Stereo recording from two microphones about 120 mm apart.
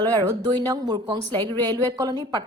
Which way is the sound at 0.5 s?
35° right (ahead or behind).